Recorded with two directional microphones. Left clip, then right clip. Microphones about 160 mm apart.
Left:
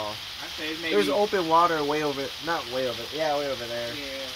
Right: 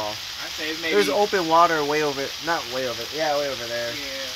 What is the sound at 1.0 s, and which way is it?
Speech, 15° right (ahead or behind).